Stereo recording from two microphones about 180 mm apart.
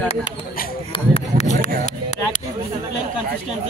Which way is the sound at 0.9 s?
35° left (ahead or behind).